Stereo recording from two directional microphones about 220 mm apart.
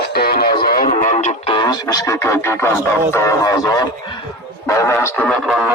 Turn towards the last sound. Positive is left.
turn(degrees=-5)  # may be behind; listen again after turning